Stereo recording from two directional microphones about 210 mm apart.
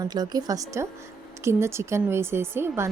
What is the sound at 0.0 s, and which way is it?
Speech, 20° right (ahead or behind).